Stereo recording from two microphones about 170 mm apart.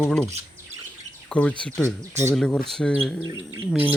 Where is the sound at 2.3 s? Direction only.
Centre (ahead or behind).